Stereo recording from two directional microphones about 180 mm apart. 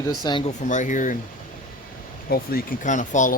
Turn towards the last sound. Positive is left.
turn(degrees=45)  # may be behind; listen again after turning